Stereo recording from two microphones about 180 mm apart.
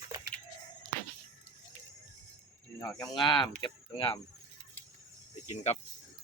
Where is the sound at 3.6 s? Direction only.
25° left (ahead or behind).